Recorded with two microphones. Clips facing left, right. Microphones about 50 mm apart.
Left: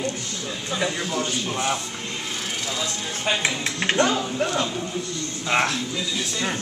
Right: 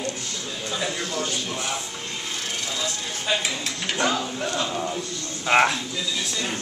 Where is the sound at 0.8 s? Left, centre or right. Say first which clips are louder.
Left 3 dB; centre.